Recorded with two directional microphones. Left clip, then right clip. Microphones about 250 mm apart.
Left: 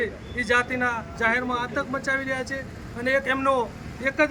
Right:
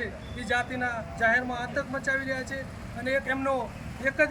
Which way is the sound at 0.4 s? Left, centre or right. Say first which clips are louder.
Left 5 dB; centre.